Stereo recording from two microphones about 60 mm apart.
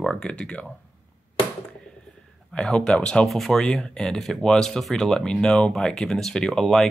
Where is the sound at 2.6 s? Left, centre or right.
Centre.